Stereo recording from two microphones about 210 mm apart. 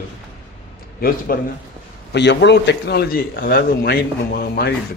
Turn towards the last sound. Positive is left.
turn(degrees=45)  # may be behind; listen again after turning